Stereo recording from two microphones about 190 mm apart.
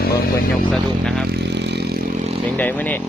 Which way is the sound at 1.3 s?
60° right (ahead or behind).